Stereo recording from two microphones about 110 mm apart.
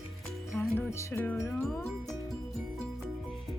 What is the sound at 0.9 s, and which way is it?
Music, 20° left (ahead or behind).